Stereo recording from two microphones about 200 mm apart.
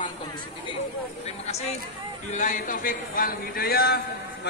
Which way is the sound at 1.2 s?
30° left (ahead or behind).